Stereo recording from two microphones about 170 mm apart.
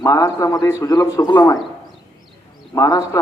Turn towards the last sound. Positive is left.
turn(degrees=20)  # may be behind; listen again after turning